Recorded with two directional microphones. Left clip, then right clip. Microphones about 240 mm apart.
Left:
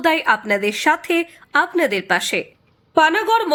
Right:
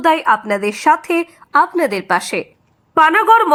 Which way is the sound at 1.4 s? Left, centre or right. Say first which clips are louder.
Right 4 dB; centre.